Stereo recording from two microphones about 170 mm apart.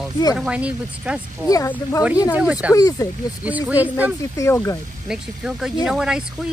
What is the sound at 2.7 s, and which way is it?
Speech, 20° left (ahead or behind).